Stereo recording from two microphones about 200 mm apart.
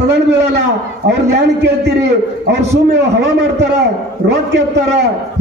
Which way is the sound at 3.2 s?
60° right (ahead or behind).